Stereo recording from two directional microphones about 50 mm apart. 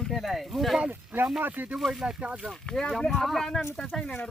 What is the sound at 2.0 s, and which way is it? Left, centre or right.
Speech, right.